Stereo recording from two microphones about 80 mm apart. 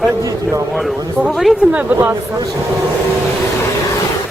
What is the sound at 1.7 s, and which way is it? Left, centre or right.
Speech, right.